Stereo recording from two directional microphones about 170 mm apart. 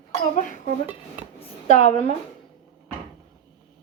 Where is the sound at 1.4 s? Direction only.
40° left (ahead or behind).